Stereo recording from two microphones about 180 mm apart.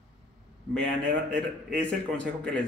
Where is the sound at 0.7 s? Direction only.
10° left (ahead or behind).